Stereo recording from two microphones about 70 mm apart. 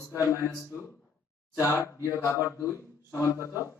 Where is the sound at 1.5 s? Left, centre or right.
Left.